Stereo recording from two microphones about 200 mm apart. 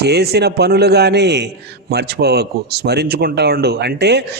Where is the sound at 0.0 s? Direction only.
55° right (ahead or behind).